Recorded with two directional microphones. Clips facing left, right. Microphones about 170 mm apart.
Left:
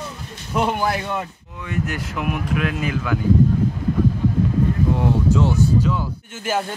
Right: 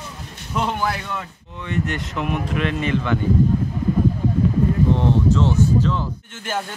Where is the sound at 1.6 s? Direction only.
5° left (ahead or behind).